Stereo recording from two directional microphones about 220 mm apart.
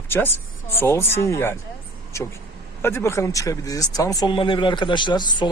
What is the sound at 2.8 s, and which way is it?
A man's voice, 10° left (ahead or behind).